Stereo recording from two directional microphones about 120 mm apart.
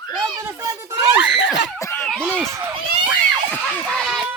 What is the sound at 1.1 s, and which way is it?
Screaming, 10° right (ahead or behind).